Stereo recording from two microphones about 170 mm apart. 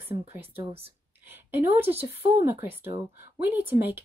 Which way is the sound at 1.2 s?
10° right (ahead or behind).